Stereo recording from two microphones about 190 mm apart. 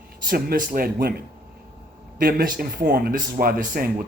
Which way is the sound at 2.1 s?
50° right (ahead or behind).